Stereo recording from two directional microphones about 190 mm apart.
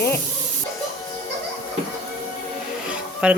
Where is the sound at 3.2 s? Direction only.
5° right (ahead or behind).